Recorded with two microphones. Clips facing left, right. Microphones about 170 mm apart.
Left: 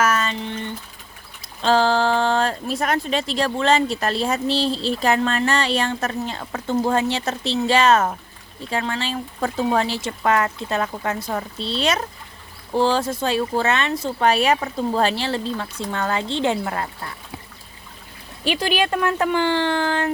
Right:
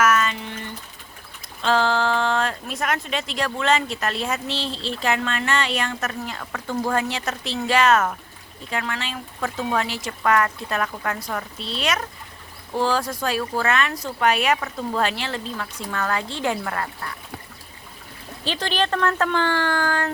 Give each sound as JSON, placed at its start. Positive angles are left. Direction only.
{"t": 0.0, "sound": "a sound", "side_deg": 30}
{"t": 1.4, "sound": "speech", "side_deg": 35}
{"t": 18.4, "sound": "speech", "side_deg": 10}